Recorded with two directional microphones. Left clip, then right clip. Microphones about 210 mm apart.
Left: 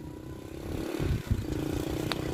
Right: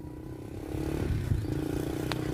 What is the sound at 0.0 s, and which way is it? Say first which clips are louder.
Vehicle: even; 50° right (ahead or behind).